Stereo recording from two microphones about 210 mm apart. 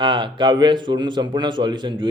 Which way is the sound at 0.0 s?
25° right (ahead or behind).